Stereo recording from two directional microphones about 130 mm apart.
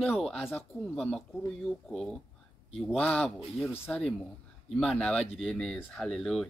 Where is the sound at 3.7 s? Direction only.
15° left (ahead or behind).